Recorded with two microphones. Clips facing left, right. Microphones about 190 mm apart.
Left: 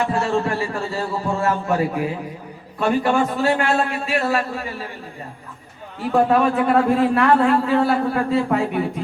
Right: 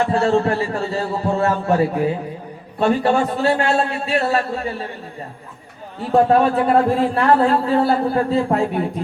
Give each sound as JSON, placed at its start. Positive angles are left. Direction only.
{"t": 0.0, "sound": "a man's voice", "side_deg": -35}
{"t": 2.7, "sound": "a man's voice", "side_deg": -35}
{"t": 6.1, "sound": "a man's voice", "side_deg": -35}